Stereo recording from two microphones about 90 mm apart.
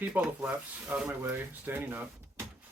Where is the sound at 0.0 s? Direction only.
15° right (ahead or behind).